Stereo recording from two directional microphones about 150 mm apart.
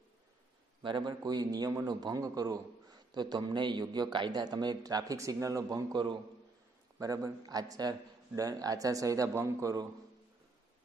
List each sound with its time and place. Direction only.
0.8 s a man's voice: 30° right (ahead or behind)